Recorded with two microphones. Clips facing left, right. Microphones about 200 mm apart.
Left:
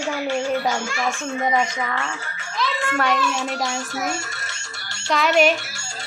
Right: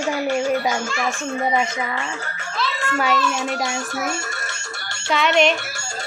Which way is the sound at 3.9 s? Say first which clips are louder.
Right 1 dB; 55° right (ahead or behind).